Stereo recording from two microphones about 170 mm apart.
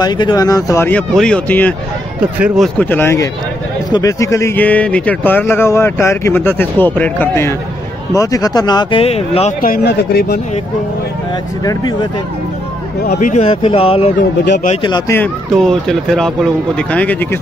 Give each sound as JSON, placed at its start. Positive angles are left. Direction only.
{"t": 0.0, "sound": "speech", "side_deg": 25}
{"t": 2.4, "sound": "speech", "side_deg": 0}
{"t": 2.8, "sound": "speech", "side_deg": 10}
{"t": 9.6, "sound": "speech", "side_deg": 60}
{"t": 11.6, "sound": "speech", "side_deg": 25}
{"t": 13.2, "sound": "speech", "side_deg": 40}
{"t": 15.5, "sound": "speech", "side_deg": 0}